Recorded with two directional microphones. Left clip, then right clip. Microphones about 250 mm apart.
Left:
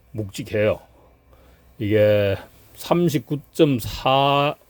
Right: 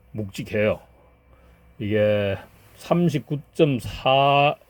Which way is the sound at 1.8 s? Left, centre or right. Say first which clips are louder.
Left 4 dB; centre.